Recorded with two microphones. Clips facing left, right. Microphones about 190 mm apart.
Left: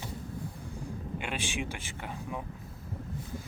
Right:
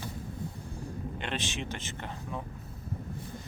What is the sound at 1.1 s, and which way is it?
Speech, 10° left (ahead or behind).